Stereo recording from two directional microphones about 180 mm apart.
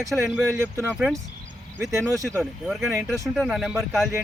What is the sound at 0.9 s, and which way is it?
Speech, 5° right (ahead or behind).